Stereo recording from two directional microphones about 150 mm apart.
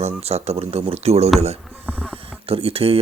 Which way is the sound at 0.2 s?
45° right (ahead or behind).